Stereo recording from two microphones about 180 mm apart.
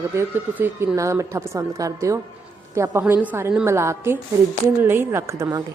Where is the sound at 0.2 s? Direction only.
10° right (ahead or behind).